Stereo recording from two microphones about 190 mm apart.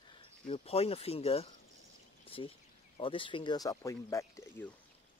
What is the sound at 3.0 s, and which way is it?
Speech, 25° left (ahead or behind).